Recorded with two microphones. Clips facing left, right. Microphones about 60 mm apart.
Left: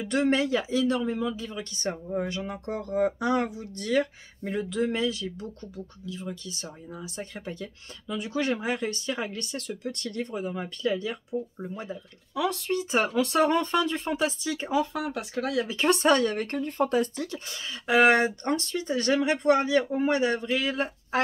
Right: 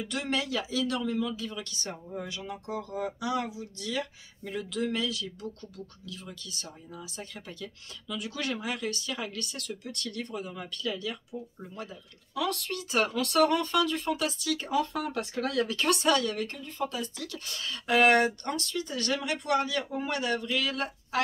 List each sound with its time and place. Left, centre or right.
0.1 s speech: left
14.8 s speech: centre
15.7 s speech: left
17.5 s speech: centre
18.5 s speech: left